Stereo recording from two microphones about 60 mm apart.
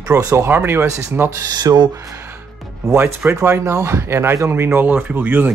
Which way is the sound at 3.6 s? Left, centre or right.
Right.